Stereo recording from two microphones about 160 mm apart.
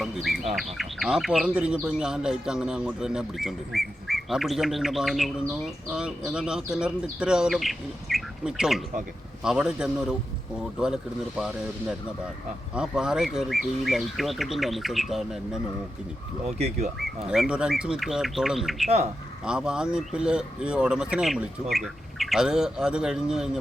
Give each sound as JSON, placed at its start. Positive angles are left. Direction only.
{"t": 0.0, "sound": "speech", "side_deg": 0}
{"t": 16.6, "sound": "speech", "side_deg": -40}
{"t": 17.0, "sound": "speech", "side_deg": 0}